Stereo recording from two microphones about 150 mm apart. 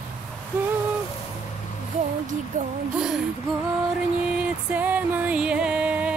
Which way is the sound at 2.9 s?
5° right (ahead or behind).